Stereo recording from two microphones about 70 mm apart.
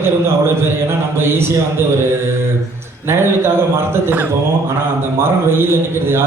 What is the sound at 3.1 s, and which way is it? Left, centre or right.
Speech, right.